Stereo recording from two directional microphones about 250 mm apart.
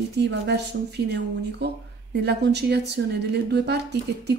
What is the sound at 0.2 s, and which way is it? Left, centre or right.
A woman's voice, right.